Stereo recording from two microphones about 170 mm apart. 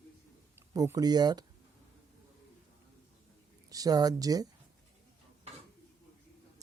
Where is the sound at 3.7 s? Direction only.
20° right (ahead or behind).